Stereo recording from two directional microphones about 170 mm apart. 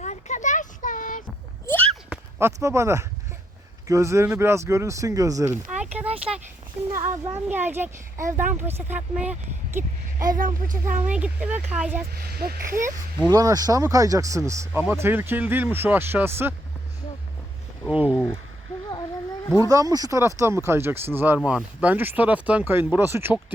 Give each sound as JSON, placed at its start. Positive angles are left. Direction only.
{"t": 0.0, "sound": "a sound", "side_deg": 45}
{"t": 1.6, "sound": "a sound", "side_deg": 10}
{"t": 2.0, "sound": "speech", "side_deg": -15}
{"t": 5.7, "sound": "a sound", "side_deg": -10}
{"t": 6.9, "sound": "speech", "side_deg": -15}
{"t": 10.3, "sound": "speech", "side_deg": -50}
{"t": 10.9, "sound": "speech", "side_deg": -10}
{"t": 12.1, "sound": "speech", "side_deg": -65}
{"t": 13.3, "sound": "speech", "side_deg": -20}
{"t": 17.8, "sound": "speech", "side_deg": -5}
{"t": 19.6, "sound": "speech", "side_deg": -20}